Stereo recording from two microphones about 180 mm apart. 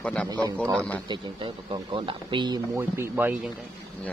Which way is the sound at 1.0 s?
25° right (ahead or behind).